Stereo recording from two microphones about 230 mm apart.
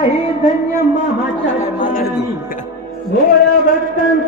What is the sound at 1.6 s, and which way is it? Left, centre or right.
Music, left.